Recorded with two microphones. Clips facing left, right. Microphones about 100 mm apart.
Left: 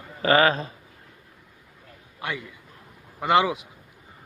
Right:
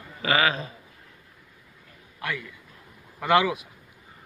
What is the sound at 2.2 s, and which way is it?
A man's voice, 20° left (ahead or behind).